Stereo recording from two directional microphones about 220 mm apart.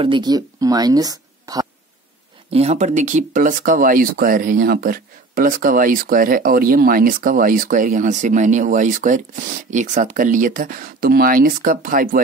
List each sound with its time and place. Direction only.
0.0 s speech: 20° right (ahead or behind)
2.5 s speech: 30° right (ahead or behind)